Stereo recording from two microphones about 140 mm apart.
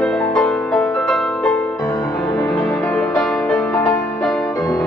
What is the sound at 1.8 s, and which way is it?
Music, 25° left (ahead or behind).